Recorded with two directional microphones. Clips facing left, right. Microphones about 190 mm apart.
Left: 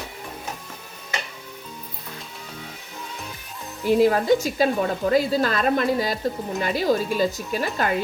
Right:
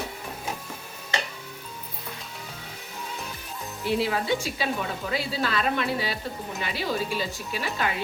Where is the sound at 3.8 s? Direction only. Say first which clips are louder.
Left 8 dB; 45° left (ahead or behind).